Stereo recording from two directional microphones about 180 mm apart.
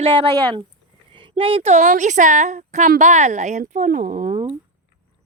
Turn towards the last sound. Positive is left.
turn(degrees=-50)  # may be behind; listen again after turning